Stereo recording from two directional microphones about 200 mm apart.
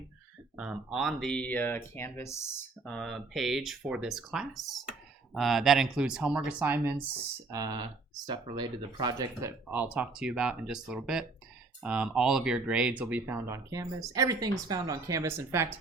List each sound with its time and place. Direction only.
0.5 s speech: 5° right (ahead or behind)